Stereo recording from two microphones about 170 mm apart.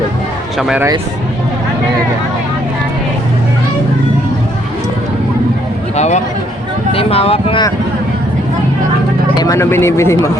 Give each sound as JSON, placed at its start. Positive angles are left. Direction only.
{"t": 0.6, "sound": "speech", "side_deg": -5}
{"t": 6.0, "sound": "a man's voice", "side_deg": 45}
{"t": 9.4, "sound": "speech", "side_deg": 15}